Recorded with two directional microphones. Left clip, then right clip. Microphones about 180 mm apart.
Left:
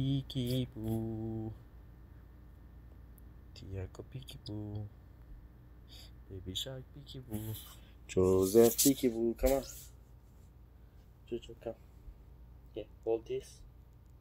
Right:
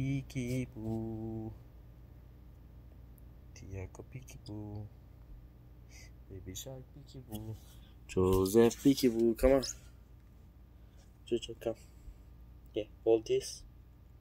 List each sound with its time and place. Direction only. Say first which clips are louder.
0.0 s speech: left 2 dB; 40° left (ahead or behind)
0.7 s mantra: left 1 dB; 20° left (ahead or behind)
4.6 s mantra: even; 25° left (ahead or behind)
5.9 s a sound: left 2 dB; 10° right (ahead or behind)
6.7 s speech: left 2 dB; 35° left (ahead or behind)
8.1 s speech: left 1 dB; 15° right (ahead or behind)
8.5 s speech: left 1 dB; 25° right (ahead or behind)
9.2 s speech: right 4 dB; 60° right (ahead or behind)
11.2 s speech: right 6 dB; 65° right (ahead or behind)
12.7 s speech: right 6 dB; 65° right (ahead or behind)